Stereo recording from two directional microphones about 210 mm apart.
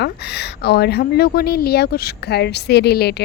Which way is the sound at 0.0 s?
50° left (ahead or behind).